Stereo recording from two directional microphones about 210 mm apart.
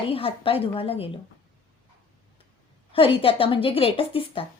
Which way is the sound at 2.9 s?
25° left (ahead or behind).